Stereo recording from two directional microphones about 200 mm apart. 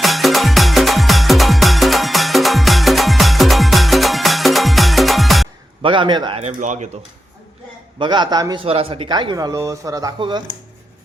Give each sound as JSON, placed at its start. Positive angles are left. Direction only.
{"t": 0.0, "sound": "music", "side_deg": 0}
{"t": 5.8, "sound": "speech", "side_deg": -25}
{"t": 7.9, "sound": "speech", "side_deg": -25}